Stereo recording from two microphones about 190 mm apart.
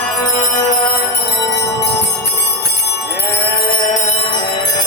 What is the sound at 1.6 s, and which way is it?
Jingle bell, 65° left (ahead or behind).